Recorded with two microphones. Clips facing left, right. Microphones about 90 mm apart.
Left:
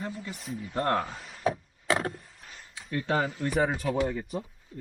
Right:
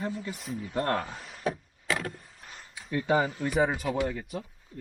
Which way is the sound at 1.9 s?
35° left (ahead or behind).